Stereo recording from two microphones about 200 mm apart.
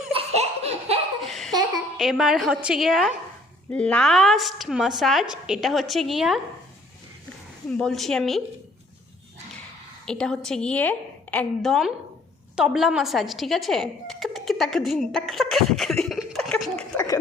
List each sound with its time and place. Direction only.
0.1 s laughter: 30° right (ahead or behind)
1.3 s laughter: centre (ahead or behind)
2.0 s a woman's voice: centre (ahead or behind)
7.7 s a woman's voice: centre (ahead or behind)
10.1 s a woman's voice: 5° left (ahead or behind)